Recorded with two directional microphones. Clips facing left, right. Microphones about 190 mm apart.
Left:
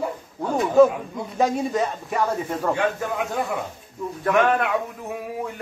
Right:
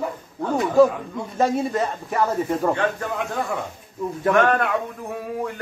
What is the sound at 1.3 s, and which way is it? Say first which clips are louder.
Speech: right 1 dB; centre (ahead or behind).